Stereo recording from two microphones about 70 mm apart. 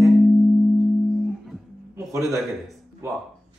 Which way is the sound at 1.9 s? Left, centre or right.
Right.